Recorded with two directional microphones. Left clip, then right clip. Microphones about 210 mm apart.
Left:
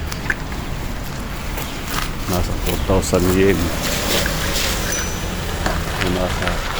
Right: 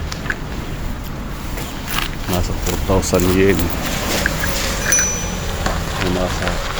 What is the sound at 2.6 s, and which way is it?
Speech, 5° right (ahead or behind).